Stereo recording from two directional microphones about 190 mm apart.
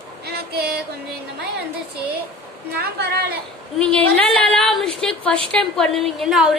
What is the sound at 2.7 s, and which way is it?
Speech, 55° right (ahead or behind).